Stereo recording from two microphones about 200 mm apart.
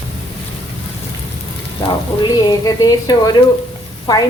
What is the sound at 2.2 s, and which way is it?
Sizzle, 20° left (ahead or behind).